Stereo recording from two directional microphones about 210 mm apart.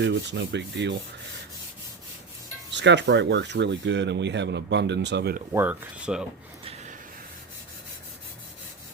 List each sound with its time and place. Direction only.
0.0 s speech: 55° right (ahead or behind)
2.7 s speech: 55° right (ahead or behind)
5.5 s speech: 5° right (ahead or behind)